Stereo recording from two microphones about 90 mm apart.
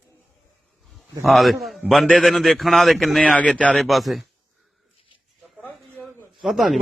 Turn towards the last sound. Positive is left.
turn(degrees=0)  # may be behind; listen again after turning